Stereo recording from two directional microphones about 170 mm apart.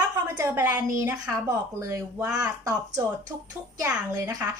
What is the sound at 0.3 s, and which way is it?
A woman's voice, 15° right (ahead or behind).